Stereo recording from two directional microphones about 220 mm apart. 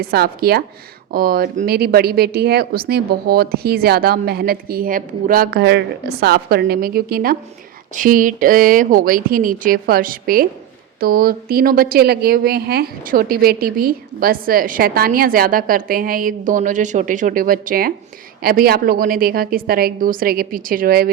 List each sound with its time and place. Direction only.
0.0 s speech: 45° right (ahead or behind)